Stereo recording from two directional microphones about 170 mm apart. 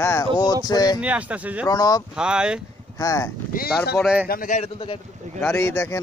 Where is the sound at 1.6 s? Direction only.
20° left (ahead or behind).